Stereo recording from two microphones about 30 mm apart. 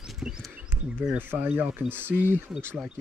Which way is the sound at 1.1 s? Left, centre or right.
Right.